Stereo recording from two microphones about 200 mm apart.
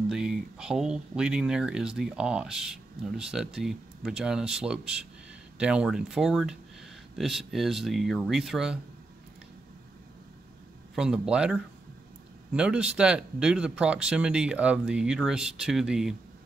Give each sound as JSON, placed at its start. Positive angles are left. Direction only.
{"t": 0.1, "sound": "speech", "side_deg": 0}
{"t": 11.0, "sound": "speech", "side_deg": -5}